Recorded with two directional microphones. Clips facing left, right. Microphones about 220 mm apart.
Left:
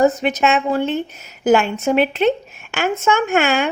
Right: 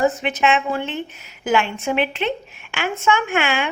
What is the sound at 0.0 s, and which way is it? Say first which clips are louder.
A woman's voice: left 4 dB; 40° left (ahead or behind).